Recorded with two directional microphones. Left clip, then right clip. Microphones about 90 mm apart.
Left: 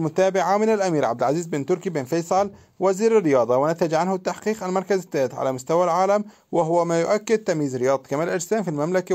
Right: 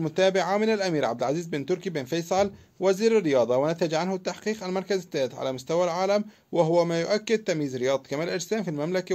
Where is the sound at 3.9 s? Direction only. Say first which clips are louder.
Left 5 dB; 55° left (ahead or behind).